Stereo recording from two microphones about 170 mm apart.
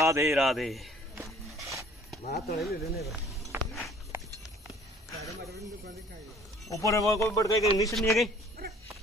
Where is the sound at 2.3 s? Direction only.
70° left (ahead or behind).